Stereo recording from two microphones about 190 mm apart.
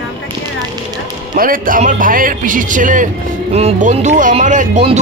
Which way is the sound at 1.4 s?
45° right (ahead or behind).